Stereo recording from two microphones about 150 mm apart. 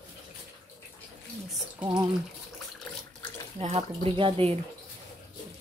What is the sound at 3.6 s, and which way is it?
Speech, 45° right (ahead or behind).